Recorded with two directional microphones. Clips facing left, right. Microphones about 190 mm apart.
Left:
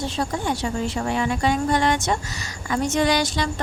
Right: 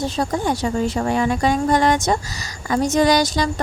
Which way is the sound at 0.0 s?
40° right (ahead or behind).